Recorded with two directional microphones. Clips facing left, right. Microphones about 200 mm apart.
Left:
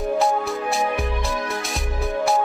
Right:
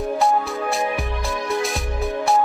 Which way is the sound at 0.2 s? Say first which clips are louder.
Right 1 dB; centre (ahead or behind).